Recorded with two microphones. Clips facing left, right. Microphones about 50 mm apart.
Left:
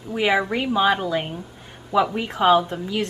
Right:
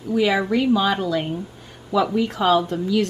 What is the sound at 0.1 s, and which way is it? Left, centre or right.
A woman's voice, left.